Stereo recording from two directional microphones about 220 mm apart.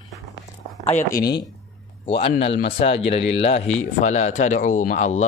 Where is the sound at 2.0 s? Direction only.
25° left (ahead or behind).